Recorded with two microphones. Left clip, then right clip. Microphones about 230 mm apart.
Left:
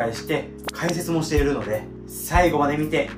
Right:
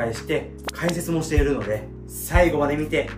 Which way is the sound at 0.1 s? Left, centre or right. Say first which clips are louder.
Even; centre.